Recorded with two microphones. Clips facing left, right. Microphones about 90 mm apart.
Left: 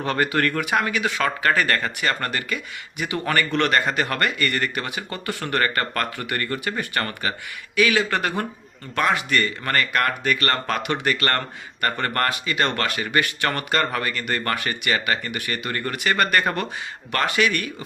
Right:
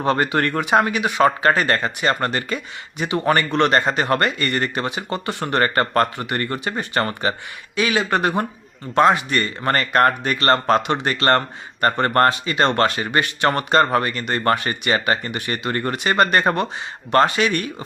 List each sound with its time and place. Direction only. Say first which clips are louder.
0.0 s speech: right 3 dB; 25° right (ahead or behind)